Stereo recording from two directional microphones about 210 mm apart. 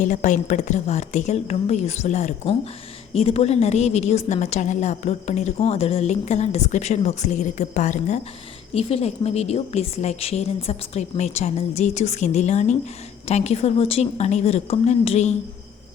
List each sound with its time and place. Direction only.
0.0 s a woman's voice: 35° left (ahead or behind)